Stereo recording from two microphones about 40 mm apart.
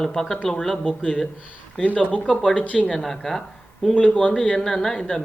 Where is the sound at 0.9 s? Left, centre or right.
Left.